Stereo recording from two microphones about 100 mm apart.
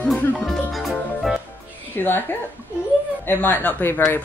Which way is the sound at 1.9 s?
20° left (ahead or behind).